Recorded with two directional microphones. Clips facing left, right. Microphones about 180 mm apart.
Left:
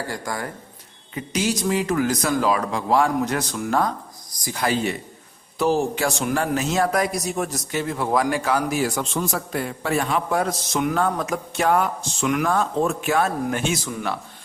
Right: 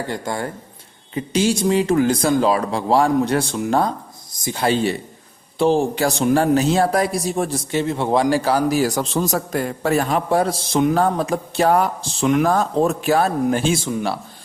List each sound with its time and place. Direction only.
0.1 s a man's voice: 25° right (ahead or behind)